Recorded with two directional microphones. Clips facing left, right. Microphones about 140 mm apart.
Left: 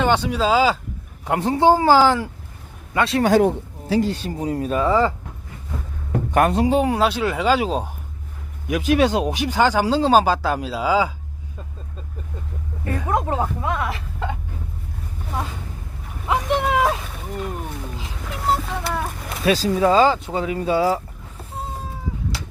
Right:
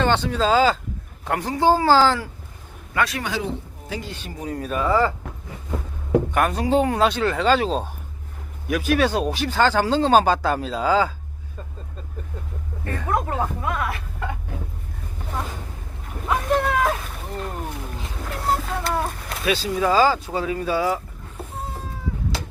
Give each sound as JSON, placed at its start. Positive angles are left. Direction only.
{"t": 0.0, "sound": "speech", "side_deg": 10}
{"t": 1.2, "sound": "speech", "side_deg": 20}
{"t": 3.2, "sound": "speech", "side_deg": 55}
{"t": 3.8, "sound": "speech", "side_deg": 40}
{"t": 6.3, "sound": "speech", "side_deg": 30}
{"t": 6.7, "sound": "speech", "side_deg": 10}
{"t": 12.8, "sound": "speech", "side_deg": 15}
{"t": 16.3, "sound": "speech", "side_deg": 15}
{"t": 19.5, "sound": "speech", "side_deg": 35}